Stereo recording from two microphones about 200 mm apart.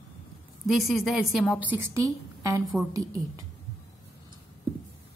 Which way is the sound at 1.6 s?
10° right (ahead or behind).